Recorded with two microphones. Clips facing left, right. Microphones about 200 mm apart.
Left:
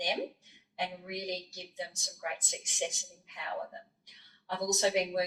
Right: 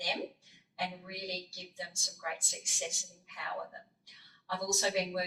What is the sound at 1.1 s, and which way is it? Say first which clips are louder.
Speech: left 4 dB; 20° left (ahead or behind).